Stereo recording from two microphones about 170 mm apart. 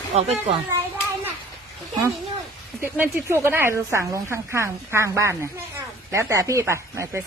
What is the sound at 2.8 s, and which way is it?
A woman's voice, 10° right (ahead or behind).